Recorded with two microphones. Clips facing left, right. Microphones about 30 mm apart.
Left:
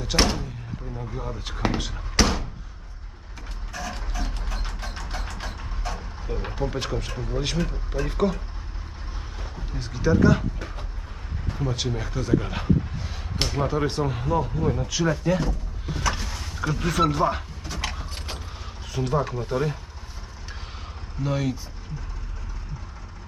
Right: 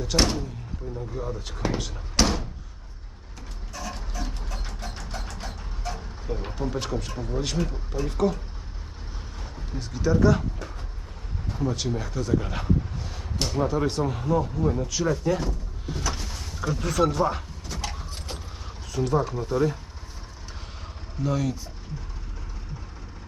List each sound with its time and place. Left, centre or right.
0.0 s speech: centre
1.8 s a sound: centre
3.7 s mechanisms: left
5.8 s speech: centre
9.4 s speech: centre
16.1 s vehicle: centre
17.7 s mechanisms: left
18.3 s mechanisms: centre
19.4 s speech: left
21.2 s speech: left